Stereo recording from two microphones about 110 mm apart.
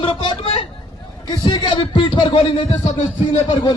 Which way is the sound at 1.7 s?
50° left (ahead or behind).